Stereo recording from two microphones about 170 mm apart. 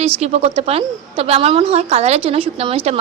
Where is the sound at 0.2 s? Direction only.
40° right (ahead or behind).